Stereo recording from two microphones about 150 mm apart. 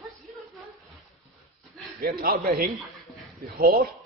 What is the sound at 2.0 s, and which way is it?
A man's voice, 85° right.